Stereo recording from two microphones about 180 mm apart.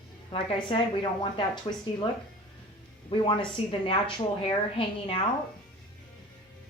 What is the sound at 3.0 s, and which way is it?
A woman's voice, 30° left (ahead or behind).